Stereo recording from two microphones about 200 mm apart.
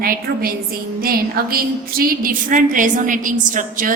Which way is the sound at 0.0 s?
45° right (ahead or behind).